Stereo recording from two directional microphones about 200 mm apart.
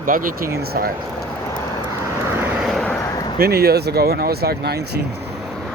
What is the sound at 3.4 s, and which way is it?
Speech, 50° right (ahead or behind).